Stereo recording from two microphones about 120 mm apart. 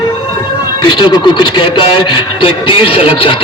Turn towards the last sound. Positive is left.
turn(degrees=50)  # may be behind; listen again after turning